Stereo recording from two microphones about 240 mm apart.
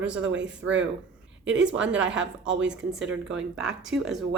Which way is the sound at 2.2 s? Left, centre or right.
Right.